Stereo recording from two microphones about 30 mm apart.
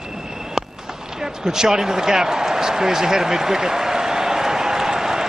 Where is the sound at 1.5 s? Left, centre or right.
Centre.